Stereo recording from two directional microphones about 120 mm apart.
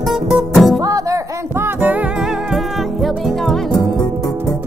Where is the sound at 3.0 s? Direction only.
Centre (ahead or behind).